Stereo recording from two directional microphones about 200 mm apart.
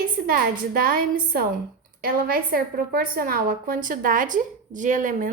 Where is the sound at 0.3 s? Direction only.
45° right (ahead or behind).